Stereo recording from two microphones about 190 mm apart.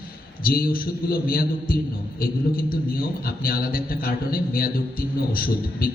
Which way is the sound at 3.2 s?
50° left (ahead or behind).